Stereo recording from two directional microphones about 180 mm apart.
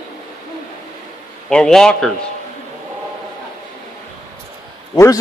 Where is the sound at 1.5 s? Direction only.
5° left (ahead or behind).